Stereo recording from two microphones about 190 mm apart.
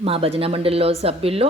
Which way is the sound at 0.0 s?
30° right (ahead or behind).